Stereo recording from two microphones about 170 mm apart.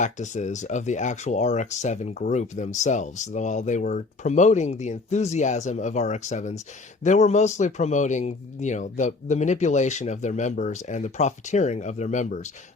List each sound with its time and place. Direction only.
0.0 s speech: 45° left (ahead or behind)